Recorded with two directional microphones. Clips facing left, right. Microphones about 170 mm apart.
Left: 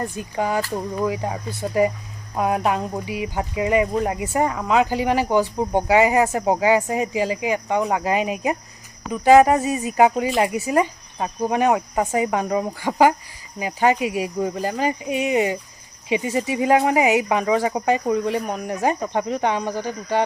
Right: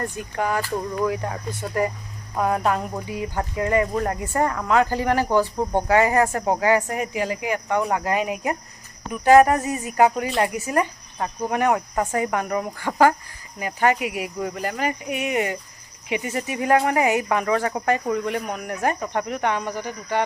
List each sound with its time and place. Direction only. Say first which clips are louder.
0.2 s speech: left 2 dB; 20° left (ahead or behind)